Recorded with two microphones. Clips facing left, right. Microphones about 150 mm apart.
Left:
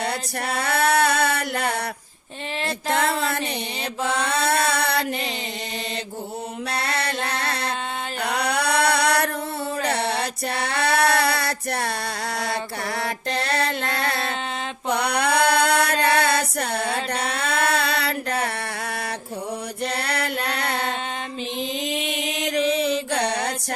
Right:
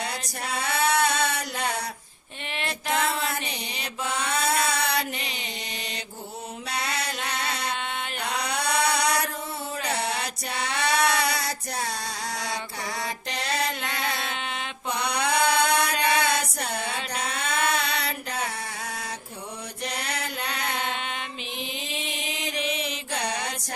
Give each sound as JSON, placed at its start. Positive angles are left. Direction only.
{"t": 0.1, "sound": "a sound", "side_deg": 60}
{"t": 2.9, "sound": "a sound", "side_deg": 60}
{"t": 4.0, "sound": "mantra", "side_deg": 30}
{"t": 4.6, "sound": "a sound", "side_deg": 60}
{"t": 6.7, "sound": "mantra", "side_deg": 60}
{"t": 7.3, "sound": "music", "side_deg": 60}
{"t": 8.2, "sound": "mantra", "side_deg": 60}
{"t": 10.0, "sound": "mantra", "side_deg": 30}
{"t": 10.5, "sound": "female singing", "side_deg": 60}
{"t": 11.1, "sound": "music", "side_deg": 60}
{"t": 13.0, "sound": "mantra", "side_deg": 60}
{"t": 17.7, "sound": "music", "side_deg": 60}
{"t": 20.0, "sound": "music", "side_deg": 65}
{"t": 22.7, "sound": "mantra", "side_deg": 35}